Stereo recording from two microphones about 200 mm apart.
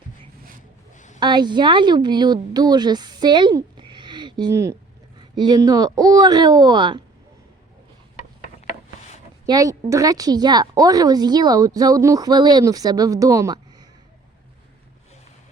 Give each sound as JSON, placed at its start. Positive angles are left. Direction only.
{"t": 0.9, "sound": "a sound", "side_deg": 40}
{"t": 1.2, "sound": "a woman's voice", "side_deg": -20}
{"t": 9.5, "sound": "a woman's voice", "side_deg": -15}